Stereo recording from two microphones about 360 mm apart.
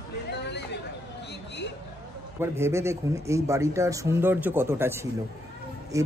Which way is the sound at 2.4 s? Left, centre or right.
Centre.